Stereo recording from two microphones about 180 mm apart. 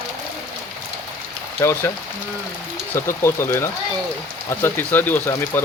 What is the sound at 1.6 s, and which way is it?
Speech, 15° left (ahead or behind).